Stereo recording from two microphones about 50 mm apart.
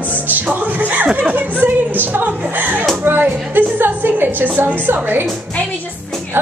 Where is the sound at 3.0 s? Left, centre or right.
Right.